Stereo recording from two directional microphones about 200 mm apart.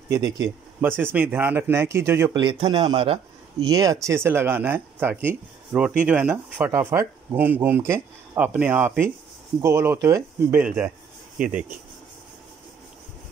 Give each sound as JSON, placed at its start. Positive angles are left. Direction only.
{"t": 0.7, "sound": "speech", "side_deg": -10}
{"t": 2.4, "sound": "a man's voice", "side_deg": -25}